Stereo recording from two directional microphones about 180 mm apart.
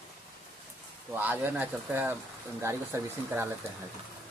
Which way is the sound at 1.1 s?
10° right (ahead or behind).